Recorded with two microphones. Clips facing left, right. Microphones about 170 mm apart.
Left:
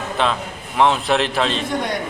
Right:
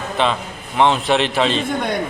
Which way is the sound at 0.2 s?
Centre (ahead or behind).